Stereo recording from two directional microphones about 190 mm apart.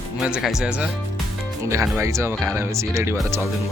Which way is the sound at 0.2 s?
5° right (ahead or behind).